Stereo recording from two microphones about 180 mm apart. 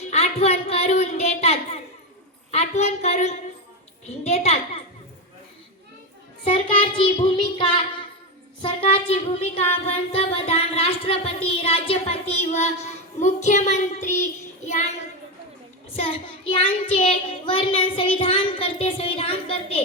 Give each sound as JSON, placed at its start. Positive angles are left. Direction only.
{"t": 0.1, "sound": "speech", "side_deg": 35}
{"t": 2.5, "sound": "music", "side_deg": 35}
{"t": 6.4, "sound": "child singing", "side_deg": 30}
{"t": 8.6, "sound": "music", "side_deg": 30}
{"t": 14.2, "sound": "child singing", "side_deg": 40}
{"t": 15.9, "sound": "child singing", "side_deg": 30}
{"t": 18.2, "sound": "music", "side_deg": 30}